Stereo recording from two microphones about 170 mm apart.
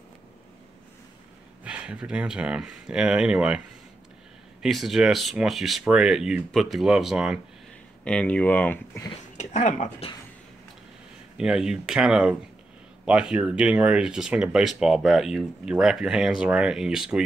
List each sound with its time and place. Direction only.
1.6 s speech: 5° right (ahead or behind); by 9.1 s 15° left (ahead or behind)
9.4 s speech: 45° left (ahead or behind)
11.3 s speech: 5° right (ahead or behind)